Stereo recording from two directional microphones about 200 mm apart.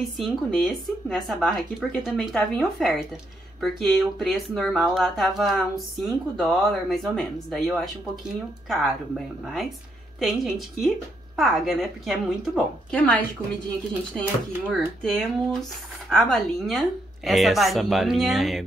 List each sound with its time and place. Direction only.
0.2 s speech: centre (ahead or behind)
14.7 s speech: centre (ahead or behind)